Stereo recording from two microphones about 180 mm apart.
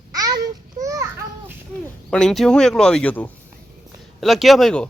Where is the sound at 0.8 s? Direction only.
15° right (ahead or behind).